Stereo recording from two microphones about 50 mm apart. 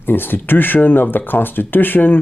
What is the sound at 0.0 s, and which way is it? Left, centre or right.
Speech, left.